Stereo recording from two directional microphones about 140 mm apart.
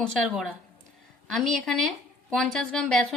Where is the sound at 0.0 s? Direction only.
Centre (ahead or behind).